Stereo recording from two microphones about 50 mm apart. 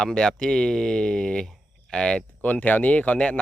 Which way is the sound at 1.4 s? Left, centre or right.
Centre.